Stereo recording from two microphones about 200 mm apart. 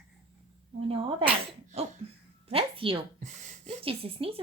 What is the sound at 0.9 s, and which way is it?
Speech, 25° right (ahead or behind).